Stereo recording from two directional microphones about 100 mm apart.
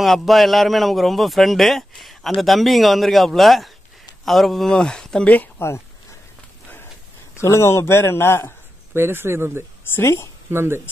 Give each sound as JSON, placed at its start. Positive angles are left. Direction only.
{"t": 0.0, "sound": "speech", "side_deg": 0}
{"t": 7.3, "sound": "speech", "side_deg": 25}
{"t": 8.9, "sound": "speech", "side_deg": -25}
{"t": 9.9, "sound": "speech", "side_deg": 25}
{"t": 10.5, "sound": "speech", "side_deg": -25}